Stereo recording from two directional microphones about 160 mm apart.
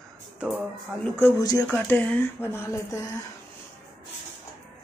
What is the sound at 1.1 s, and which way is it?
Speech, 20° left (ahead or behind).